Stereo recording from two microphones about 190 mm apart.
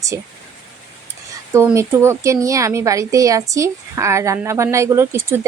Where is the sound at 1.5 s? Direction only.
15° right (ahead or behind).